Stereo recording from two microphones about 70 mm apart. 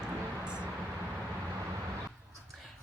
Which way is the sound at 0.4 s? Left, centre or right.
Centre.